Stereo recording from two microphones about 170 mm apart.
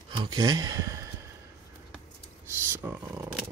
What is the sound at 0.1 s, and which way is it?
Speech, 25° right (ahead or behind).